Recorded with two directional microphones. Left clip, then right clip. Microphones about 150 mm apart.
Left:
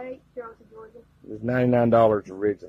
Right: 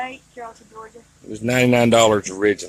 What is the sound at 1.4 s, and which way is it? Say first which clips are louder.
Speech: right 5 dB; 35° right (ahead or behind).